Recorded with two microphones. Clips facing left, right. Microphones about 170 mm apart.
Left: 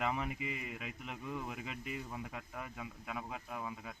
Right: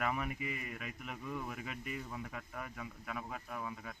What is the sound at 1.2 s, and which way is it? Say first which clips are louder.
A man's voice: even; 10° left (ahead or behind).